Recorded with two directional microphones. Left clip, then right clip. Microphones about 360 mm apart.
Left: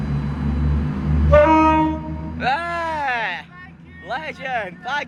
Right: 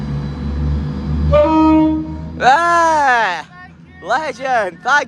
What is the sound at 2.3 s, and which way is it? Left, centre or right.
Music, centre.